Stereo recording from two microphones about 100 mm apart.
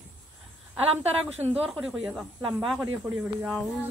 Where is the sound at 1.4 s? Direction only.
85° right.